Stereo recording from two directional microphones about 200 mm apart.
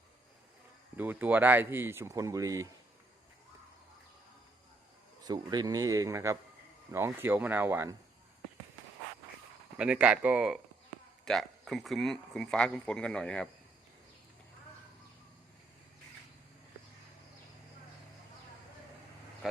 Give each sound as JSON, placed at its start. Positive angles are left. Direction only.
{"t": 0.9, "sound": "speech", "side_deg": -10}
{"t": 5.2, "sound": "speech", "side_deg": -20}
{"t": 9.7, "sound": "speech", "side_deg": -5}